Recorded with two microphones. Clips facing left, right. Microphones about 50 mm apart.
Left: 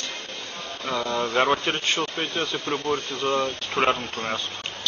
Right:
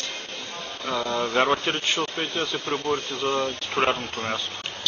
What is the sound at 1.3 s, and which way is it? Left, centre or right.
Speech, centre.